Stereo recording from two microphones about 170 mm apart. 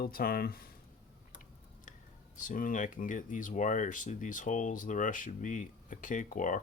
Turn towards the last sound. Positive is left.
turn(degrees=50)  # may be behind; listen again after turning